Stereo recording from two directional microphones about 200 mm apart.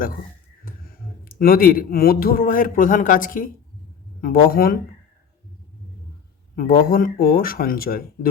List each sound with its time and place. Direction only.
0.6 s speech: 45° left (ahead or behind)
6.6 s speech: 45° left (ahead or behind)